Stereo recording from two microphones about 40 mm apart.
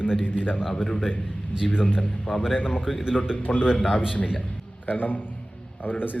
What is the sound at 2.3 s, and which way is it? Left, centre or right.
Speech, left.